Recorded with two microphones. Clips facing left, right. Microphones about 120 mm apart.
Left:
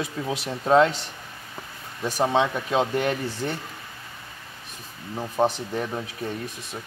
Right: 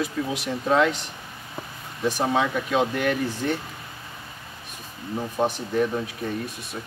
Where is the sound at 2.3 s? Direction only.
25° left (ahead or behind).